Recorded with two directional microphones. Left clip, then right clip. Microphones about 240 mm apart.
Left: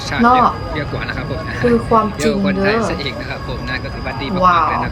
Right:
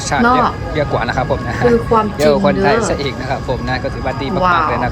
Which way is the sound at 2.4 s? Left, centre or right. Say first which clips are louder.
Right 3 dB; centre.